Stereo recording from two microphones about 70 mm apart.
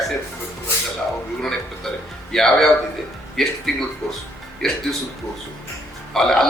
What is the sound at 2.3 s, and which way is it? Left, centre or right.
A man's voice, centre.